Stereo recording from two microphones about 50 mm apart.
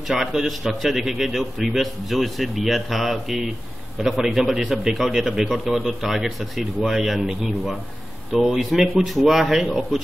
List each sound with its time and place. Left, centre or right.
0.1 s a man's voice: centre